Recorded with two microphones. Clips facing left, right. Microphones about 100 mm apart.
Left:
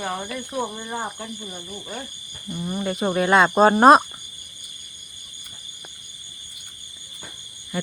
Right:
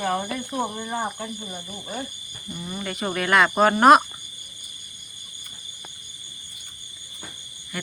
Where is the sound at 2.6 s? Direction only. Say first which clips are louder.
Left 5 dB; 25° left (ahead or behind).